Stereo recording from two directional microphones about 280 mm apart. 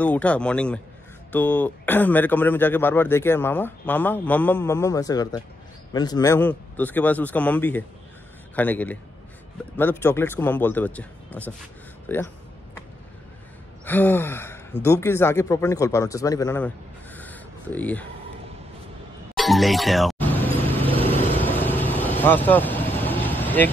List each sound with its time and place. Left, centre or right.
0.0 s a man's voice: centre
13.8 s speech: centre
19.3 s music: centre
20.8 s vehicle: centre
21.4 s vehicle: centre